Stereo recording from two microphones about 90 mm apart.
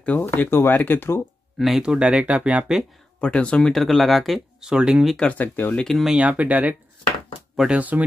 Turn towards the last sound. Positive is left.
turn(degrees=-5)  # may be behind; listen again after turning